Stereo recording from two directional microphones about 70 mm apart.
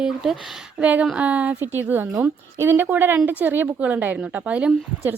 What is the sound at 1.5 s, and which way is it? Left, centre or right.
A woman's voice, right.